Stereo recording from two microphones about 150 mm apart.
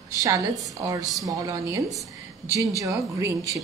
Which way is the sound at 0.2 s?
25° right (ahead or behind).